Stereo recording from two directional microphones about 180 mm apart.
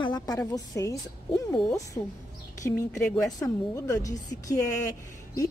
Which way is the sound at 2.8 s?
15° left (ahead or behind).